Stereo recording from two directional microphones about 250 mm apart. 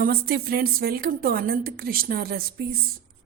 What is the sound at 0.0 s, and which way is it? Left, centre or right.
A woman's voice, right.